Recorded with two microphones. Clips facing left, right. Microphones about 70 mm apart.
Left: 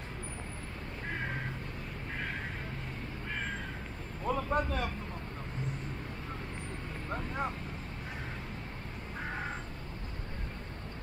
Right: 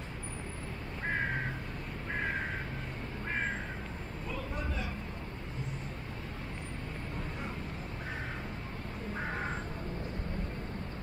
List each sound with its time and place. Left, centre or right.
4.3 s vehicle: left